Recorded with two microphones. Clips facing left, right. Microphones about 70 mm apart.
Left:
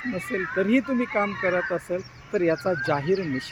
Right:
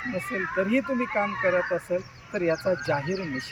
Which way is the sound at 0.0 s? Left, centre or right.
Centre.